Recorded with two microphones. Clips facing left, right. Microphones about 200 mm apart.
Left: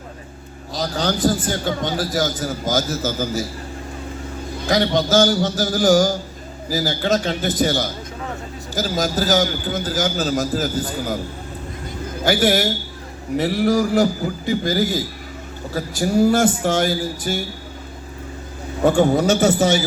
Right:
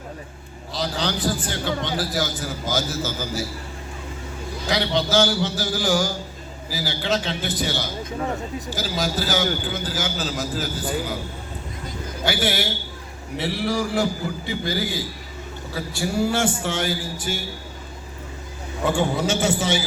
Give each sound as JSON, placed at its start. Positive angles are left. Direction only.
{"t": 0.7, "sound": "a man's voice", "side_deg": 45}
{"t": 4.7, "sound": "a man's voice", "side_deg": 45}
{"t": 12.2, "sound": "a man's voice", "side_deg": 40}
{"t": 18.9, "sound": "a man's voice", "side_deg": 40}